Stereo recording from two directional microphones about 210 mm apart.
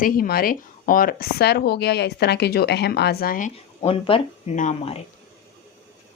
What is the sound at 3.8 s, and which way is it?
A woman's voice, 25° left (ahead or behind).